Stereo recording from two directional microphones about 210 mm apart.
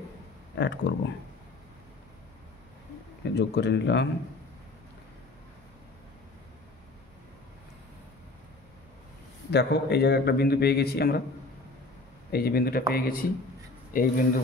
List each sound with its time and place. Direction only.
0.6 s speech: 55° left (ahead or behind)
3.3 s a man's voice: 55° left (ahead or behind)
9.5 s a man's voice: 50° left (ahead or behind)
12.3 s a man's voice: 45° left (ahead or behind)